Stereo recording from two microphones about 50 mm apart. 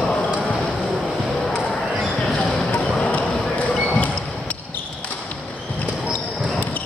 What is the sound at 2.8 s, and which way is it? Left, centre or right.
Music, centre.